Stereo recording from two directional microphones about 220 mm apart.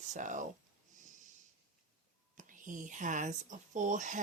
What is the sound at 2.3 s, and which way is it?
Speech, 35° right (ahead or behind).